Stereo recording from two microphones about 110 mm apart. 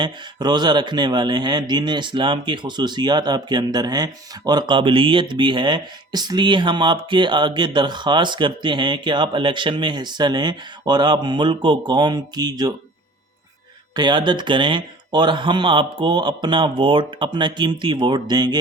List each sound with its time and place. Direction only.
0.0 s speech: 40° right (ahead or behind)
13.9 s speech: 40° right (ahead or behind)